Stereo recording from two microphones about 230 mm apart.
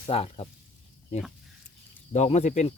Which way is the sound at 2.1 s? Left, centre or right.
Left.